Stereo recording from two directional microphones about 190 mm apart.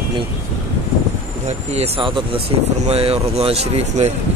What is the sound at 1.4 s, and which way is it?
Speech, 35° right (ahead or behind).